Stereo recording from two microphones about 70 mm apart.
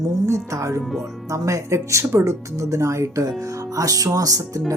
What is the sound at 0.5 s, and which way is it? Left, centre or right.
Speech, right.